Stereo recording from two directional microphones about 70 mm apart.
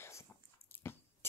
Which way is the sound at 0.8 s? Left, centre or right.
Left.